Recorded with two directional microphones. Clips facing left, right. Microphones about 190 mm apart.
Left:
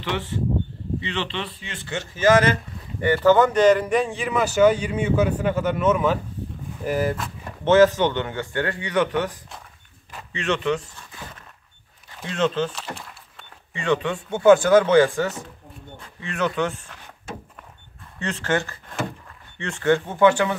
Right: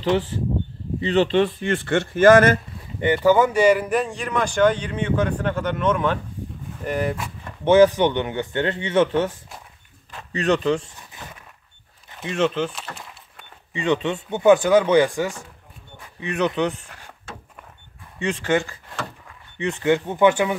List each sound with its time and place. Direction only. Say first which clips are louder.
0.0 s speech: right 5 dB; 35° right (ahead or behind)
3.3 s a man's voice: left 1 dB; 10° right (ahead or behind)
7.6 s a man's voice: right 1 dB; 15° right (ahead or behind)
10.3 s speech: right 3 dB; 35° right (ahead or behind)
11.0 s a sound: even; 15° right (ahead or behind)
12.3 s speech: right 1 dB; 15° right (ahead or behind)
12.9 s a sound: left 2 dB; 5° right (ahead or behind)
13.7 s a man's voice: right 1 dB; 20° right (ahead or behind)
18.2 s speech: right 3 dB; 15° right (ahead or behind)